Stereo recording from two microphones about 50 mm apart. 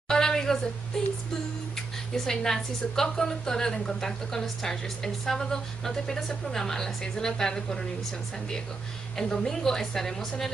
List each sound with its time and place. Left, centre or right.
0.1 s a woman's voice: centre
2.1 s a woman's voice: centre
9.1 s a woman's voice: centre